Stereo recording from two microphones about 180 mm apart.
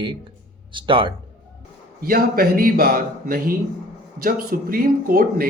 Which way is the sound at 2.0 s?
55° right (ahead or behind).